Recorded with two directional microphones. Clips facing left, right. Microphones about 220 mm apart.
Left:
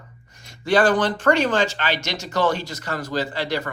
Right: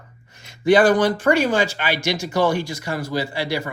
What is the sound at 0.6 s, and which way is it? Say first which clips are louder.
Speech: right 4 dB; 15° right (ahead or behind).